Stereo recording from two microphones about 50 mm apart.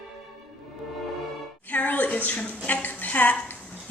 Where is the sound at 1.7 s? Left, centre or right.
Left.